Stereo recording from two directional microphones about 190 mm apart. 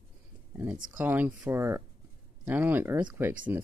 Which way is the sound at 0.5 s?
10° right (ahead or behind).